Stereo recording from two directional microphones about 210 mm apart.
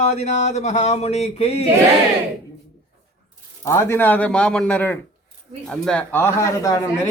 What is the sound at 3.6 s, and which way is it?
A man's voice, 10° left (ahead or behind).